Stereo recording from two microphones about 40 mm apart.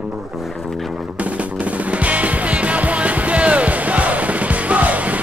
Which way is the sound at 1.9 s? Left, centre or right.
Right.